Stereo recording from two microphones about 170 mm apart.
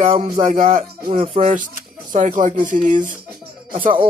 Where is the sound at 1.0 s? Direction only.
35° right (ahead or behind).